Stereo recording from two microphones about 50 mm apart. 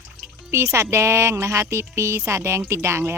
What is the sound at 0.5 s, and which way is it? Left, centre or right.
A woman's voice, right.